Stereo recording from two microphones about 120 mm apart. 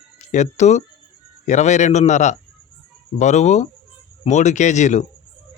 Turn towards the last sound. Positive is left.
turn(degrees=80)